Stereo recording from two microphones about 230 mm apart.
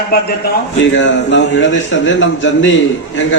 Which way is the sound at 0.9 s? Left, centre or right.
Left.